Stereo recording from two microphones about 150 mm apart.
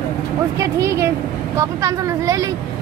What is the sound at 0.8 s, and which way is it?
Speech, 20° right (ahead or behind).